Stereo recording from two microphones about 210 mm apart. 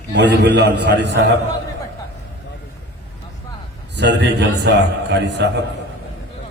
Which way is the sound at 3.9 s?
55° right (ahead or behind).